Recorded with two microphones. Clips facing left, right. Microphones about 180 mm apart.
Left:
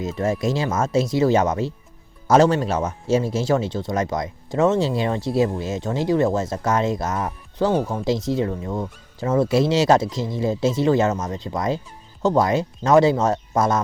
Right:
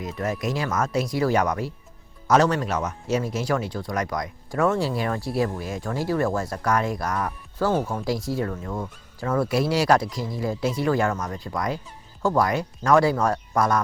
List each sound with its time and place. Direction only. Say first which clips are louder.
0.0 s speech: left 5 dB; 25° left (ahead or behind)